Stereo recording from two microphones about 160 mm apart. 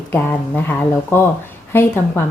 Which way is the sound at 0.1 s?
10° left (ahead or behind).